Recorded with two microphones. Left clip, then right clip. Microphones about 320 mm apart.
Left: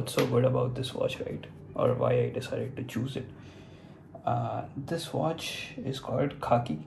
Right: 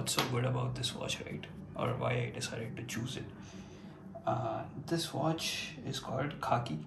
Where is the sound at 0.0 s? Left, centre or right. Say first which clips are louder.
Left 8 dB; centre.